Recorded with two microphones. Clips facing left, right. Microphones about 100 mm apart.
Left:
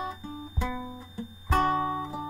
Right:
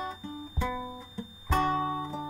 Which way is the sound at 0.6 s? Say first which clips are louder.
Right 1 dB; centre (ahead or behind).